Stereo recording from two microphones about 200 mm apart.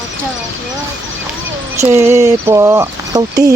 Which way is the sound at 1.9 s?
15° right (ahead or behind).